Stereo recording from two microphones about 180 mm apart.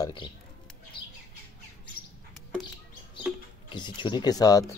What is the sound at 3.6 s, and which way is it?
Speech, 25° left (ahead or behind).